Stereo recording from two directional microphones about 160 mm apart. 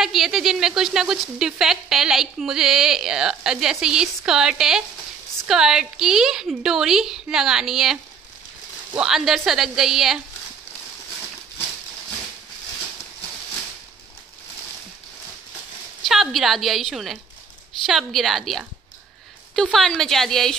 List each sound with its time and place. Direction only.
0.0 s speech: centre (ahead or behind)
16.0 s speech: centre (ahead or behind)